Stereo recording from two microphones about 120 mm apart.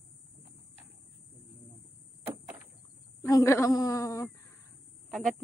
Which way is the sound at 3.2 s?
25° left (ahead or behind).